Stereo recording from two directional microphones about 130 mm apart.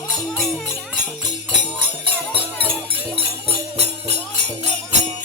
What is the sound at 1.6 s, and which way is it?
Music, 40° right (ahead or behind).